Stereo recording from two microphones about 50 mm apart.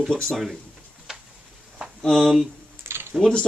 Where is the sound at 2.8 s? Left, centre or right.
Right.